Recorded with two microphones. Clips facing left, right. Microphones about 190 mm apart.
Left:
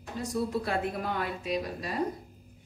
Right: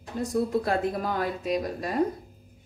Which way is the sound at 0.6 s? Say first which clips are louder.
Right 4 dB; 40° right (ahead or behind).